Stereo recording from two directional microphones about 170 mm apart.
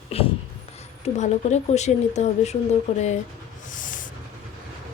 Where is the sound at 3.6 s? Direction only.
50° left (ahead or behind).